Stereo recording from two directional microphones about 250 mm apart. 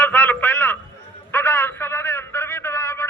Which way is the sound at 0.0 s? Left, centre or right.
Centre.